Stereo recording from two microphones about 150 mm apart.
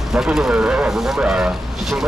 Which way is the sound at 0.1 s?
5° right (ahead or behind).